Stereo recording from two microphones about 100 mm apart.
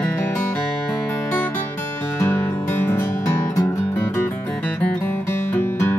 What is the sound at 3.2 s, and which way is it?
Music, 30° left (ahead or behind).